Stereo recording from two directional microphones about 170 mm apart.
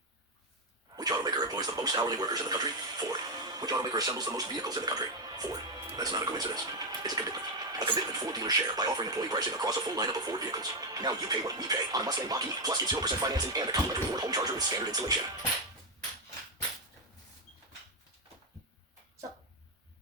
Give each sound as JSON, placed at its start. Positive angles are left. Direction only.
{"t": 0.9, "sound": "speech", "side_deg": -25}